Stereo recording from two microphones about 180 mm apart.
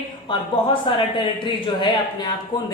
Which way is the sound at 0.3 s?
25° left (ahead or behind).